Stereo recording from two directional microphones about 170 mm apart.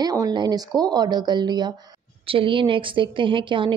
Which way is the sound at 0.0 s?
20° right (ahead or behind).